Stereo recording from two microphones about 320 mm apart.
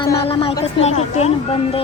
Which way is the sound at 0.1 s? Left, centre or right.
Centre.